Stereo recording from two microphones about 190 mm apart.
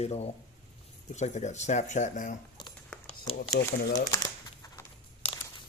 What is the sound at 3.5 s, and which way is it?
Speech, 60° left (ahead or behind).